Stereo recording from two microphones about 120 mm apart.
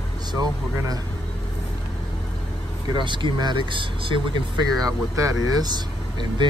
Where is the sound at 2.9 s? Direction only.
40° right (ahead or behind).